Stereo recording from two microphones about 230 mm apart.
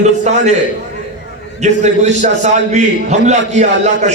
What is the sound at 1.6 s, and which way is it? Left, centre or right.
A man's voice, right.